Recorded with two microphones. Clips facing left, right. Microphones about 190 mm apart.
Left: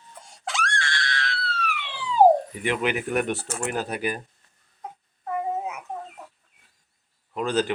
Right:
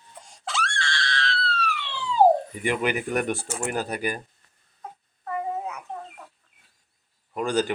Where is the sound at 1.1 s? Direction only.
20° left (ahead or behind).